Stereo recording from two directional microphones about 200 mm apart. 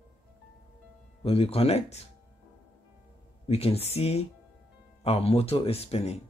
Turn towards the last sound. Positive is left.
turn(degrees=30)  # may be behind; listen again after turning